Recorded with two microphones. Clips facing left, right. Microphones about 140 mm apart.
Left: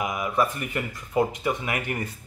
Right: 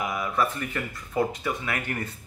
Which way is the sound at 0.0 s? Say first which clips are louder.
Left 2 dB; 15° left (ahead or behind).